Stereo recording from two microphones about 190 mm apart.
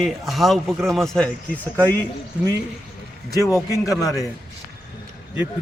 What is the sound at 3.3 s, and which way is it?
Speech, 15° left (ahead or behind).